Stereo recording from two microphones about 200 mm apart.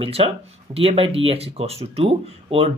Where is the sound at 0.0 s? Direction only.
30° right (ahead or behind).